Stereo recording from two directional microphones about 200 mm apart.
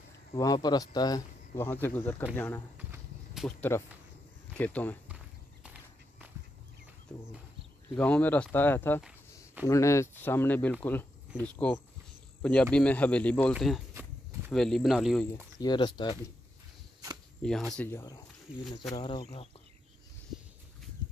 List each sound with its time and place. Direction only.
0.4 s speech: 20° left (ahead or behind)
2.8 s walk: 10° right (ahead or behind)
3.4 s speech: 10° left (ahead or behind)
7.9 s speech: 5° left (ahead or behind)
15.6 s speech: 20° left (ahead or behind)
17.4 s speech: 5° left (ahead or behind); by 19.5 s 25° left (ahead or behind)